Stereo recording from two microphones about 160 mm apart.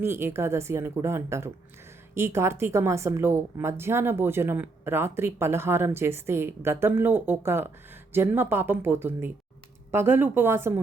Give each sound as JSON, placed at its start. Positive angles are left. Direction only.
{"t": 0.0, "sound": "a woman's voice", "side_deg": -15}